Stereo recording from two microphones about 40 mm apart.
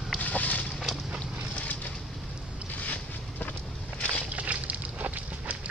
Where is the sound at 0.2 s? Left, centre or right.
Left.